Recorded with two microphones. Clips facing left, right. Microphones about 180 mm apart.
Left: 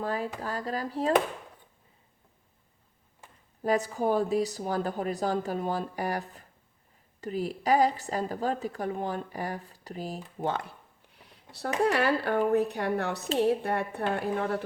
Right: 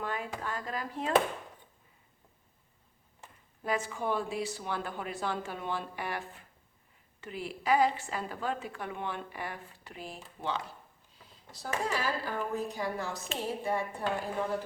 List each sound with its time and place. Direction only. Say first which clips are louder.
0.0 s speech: left 5 dB; 35° left (ahead or behind)
3.6 s a woman's voice: left 6 dB; 40° left (ahead or behind); by 14.6 s 65° left (ahead or behind)